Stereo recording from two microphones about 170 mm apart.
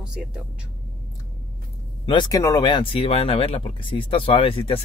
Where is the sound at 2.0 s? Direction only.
25° left (ahead or behind).